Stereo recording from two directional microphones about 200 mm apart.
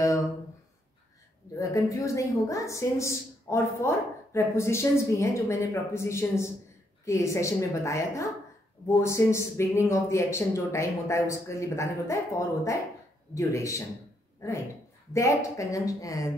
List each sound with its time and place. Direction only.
1.6 s a woman's voice: 15° left (ahead or behind)